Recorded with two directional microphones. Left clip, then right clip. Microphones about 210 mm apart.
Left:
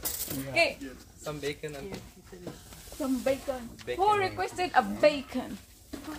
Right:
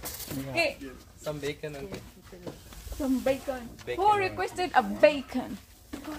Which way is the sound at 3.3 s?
35° right (ahead or behind).